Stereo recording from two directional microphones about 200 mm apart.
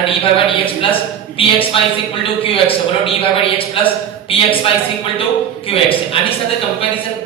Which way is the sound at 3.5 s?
25° left (ahead or behind).